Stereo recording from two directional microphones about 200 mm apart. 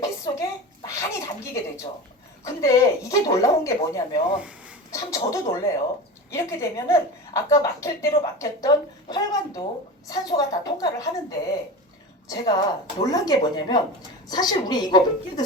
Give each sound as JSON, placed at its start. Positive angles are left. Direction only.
{"t": 0.0, "sound": "a sound", "side_deg": 15}
{"t": 2.4, "sound": "a woman's voice", "side_deg": 15}
{"t": 4.4, "sound": "speech", "side_deg": -5}
{"t": 4.9, "sound": "a woman's voice", "side_deg": 15}